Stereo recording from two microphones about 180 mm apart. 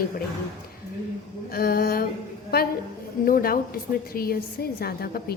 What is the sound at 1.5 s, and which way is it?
Speech, 55° left (ahead or behind).